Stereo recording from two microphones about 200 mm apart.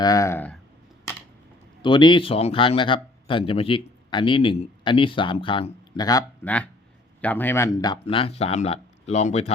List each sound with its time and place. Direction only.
0.0 s speech: 15° left (ahead or behind)
1.8 s speech: 25° left (ahead or behind)
6.4 s speech: 5° left (ahead or behind)
8.0 s speech: 30° left (ahead or behind)